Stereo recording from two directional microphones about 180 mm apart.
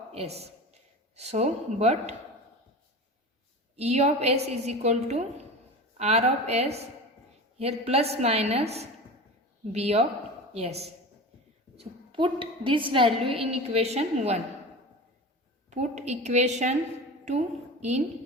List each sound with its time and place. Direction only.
0.1 s speech: 35° right (ahead or behind)
3.8 s a woman's voice: 35° right (ahead or behind)
15.7 s a woman's voice: 40° right (ahead or behind)